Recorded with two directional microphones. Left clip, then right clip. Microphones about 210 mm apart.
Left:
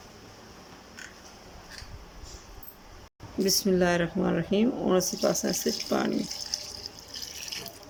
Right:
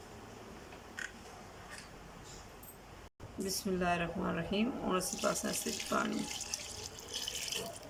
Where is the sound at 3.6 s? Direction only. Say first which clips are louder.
Left 5 dB; 35° left (ahead or behind).